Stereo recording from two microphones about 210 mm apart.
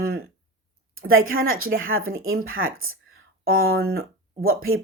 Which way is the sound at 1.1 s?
75° right (ahead or behind).